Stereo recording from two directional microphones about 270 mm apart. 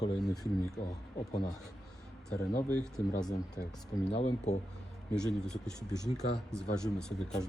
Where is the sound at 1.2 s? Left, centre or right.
Centre.